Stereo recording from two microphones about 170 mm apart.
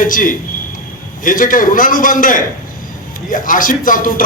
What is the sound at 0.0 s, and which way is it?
A man's voice, 50° left (ahead or behind).